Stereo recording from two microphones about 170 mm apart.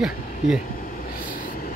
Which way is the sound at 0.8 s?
55° left (ahead or behind).